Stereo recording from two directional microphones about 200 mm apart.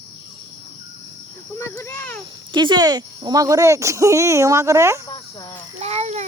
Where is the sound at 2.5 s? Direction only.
25° right (ahead or behind).